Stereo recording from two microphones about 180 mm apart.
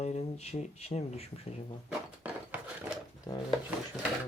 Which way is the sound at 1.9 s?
10° right (ahead or behind).